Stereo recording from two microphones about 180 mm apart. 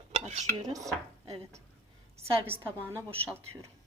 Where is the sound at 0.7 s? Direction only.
20° right (ahead or behind).